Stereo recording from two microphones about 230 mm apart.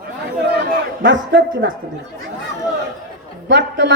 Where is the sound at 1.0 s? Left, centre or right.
Right.